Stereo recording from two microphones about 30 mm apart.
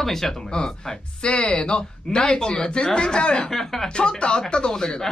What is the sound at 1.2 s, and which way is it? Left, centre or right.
Speech, left.